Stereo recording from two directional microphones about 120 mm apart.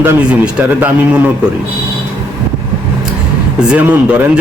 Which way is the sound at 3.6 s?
10° right (ahead or behind).